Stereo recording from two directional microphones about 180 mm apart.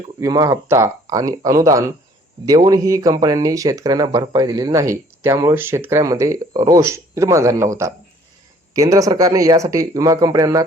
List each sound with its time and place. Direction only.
0.2 s speech: 20° right (ahead or behind)